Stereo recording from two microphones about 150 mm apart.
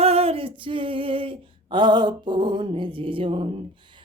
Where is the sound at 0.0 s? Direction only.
40° right (ahead or behind).